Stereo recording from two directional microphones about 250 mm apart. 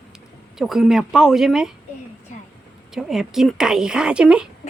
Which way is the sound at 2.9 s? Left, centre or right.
Centre.